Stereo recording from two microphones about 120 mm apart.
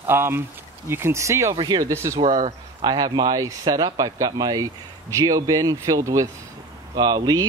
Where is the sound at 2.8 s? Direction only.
35° right (ahead or behind).